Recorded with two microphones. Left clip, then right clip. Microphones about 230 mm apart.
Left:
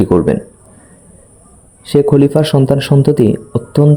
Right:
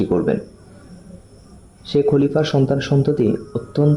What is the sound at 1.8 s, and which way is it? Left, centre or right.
A man's voice, left.